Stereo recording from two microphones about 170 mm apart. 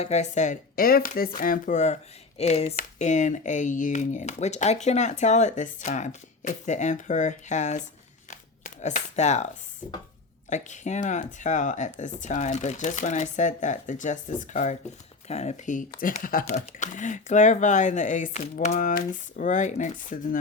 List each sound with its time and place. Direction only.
0.0 s speech: 40° left (ahead or behind)
8.3 s a sound: 45° left (ahead or behind)
10.5 s speech: 45° left (ahead or behind)